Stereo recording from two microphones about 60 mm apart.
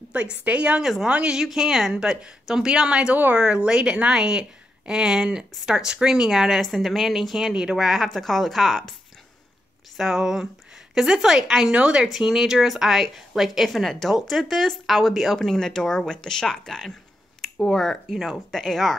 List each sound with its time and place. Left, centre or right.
0.1 s a woman's voice: centre
1.4 s a woman's voice: centre
9.9 s a woman's voice: centre
12.1 s speech: centre
18.1 s speech: centre